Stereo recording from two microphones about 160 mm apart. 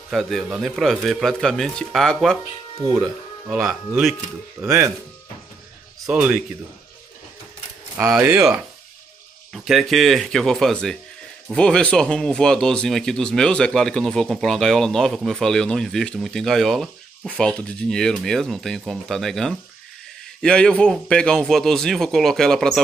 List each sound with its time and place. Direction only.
0.1 s speech: centre (ahead or behind)
3.4 s speech: 10° right (ahead or behind)
6.0 s speech: 5° right (ahead or behind)
8.2 s speech: 15° right (ahead or behind)
9.5 s speech: centre (ahead or behind)